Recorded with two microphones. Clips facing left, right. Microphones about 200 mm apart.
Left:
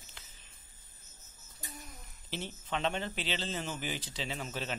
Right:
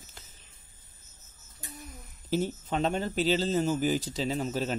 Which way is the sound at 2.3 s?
45° right (ahead or behind).